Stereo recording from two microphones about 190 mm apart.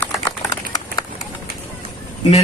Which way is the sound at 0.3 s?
20° left (ahead or behind).